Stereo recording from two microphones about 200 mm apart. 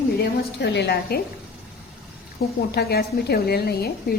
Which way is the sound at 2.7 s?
55° left (ahead or behind).